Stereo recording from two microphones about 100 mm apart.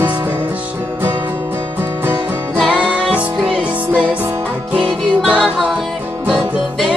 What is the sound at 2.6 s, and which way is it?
Music, 10° right (ahead or behind).